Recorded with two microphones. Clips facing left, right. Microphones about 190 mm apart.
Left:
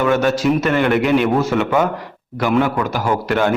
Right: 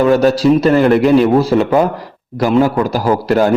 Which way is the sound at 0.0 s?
35° right (ahead or behind).